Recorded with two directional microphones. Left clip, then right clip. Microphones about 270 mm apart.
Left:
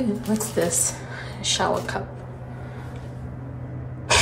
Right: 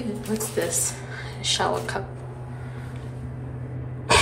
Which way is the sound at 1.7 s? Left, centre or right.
Centre.